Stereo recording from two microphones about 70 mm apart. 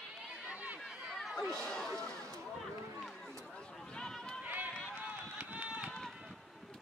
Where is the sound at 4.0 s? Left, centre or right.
Centre.